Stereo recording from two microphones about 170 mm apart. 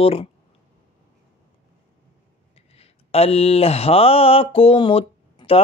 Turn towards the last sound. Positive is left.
turn(degrees=35)  # may be behind; listen again after turning